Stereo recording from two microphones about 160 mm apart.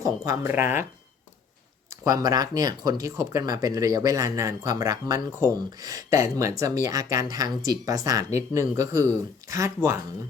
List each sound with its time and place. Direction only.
0.0 s speech: 15° right (ahead or behind)
2.0 s speech: 20° right (ahead or behind)